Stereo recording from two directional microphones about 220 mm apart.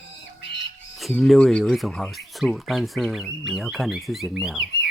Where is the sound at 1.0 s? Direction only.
Centre (ahead or behind).